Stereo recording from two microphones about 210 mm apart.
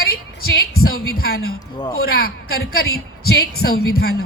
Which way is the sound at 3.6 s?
45° left (ahead or behind).